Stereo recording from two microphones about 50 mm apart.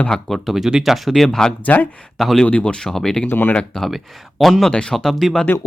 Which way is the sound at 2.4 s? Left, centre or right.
Left.